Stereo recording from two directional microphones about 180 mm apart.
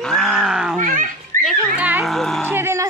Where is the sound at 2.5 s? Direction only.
15° right (ahead or behind).